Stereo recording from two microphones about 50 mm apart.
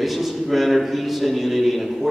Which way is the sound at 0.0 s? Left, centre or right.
Centre.